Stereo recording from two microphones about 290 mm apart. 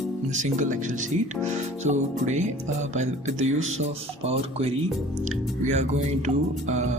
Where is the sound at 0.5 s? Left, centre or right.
Right.